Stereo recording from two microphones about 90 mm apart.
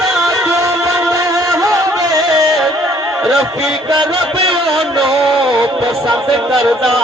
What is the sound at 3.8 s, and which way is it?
Music, 55° right (ahead or behind).